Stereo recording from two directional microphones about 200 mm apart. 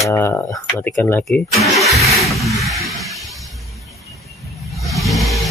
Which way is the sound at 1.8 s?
Centre (ahead or behind).